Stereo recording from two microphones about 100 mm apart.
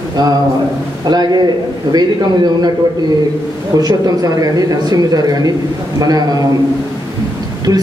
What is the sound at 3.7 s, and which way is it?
Speech, 40° right (ahead or behind).